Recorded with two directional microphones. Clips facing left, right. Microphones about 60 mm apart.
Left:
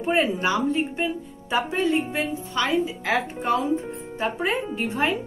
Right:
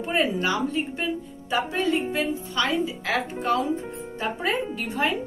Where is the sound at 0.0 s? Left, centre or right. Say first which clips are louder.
Left 2 dB; left.